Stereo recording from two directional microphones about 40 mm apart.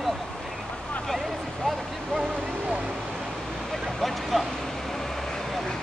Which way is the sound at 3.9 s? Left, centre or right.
Centre.